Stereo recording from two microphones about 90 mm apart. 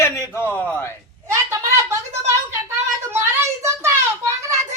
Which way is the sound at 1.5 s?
35° right (ahead or behind).